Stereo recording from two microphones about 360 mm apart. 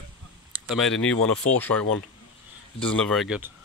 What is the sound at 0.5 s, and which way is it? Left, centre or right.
Speech, centre.